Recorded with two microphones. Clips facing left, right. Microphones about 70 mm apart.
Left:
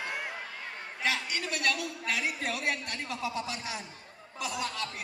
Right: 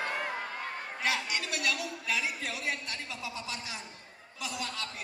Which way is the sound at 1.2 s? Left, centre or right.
Left.